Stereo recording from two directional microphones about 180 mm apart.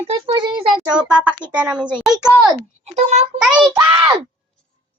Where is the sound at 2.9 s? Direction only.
40° right (ahead or behind).